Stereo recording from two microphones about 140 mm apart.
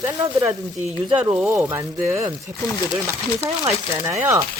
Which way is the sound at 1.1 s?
15° right (ahead or behind).